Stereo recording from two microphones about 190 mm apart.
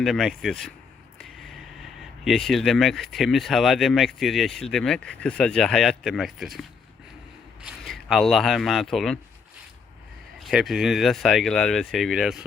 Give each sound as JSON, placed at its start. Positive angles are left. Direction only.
{"t": 0.0, "sound": "speech", "side_deg": 0}
{"t": 2.2, "sound": "speech", "side_deg": 0}
{"t": 10.4, "sound": "speech", "side_deg": 0}